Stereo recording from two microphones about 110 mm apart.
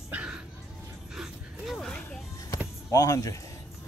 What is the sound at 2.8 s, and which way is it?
Speech, 30° left (ahead or behind).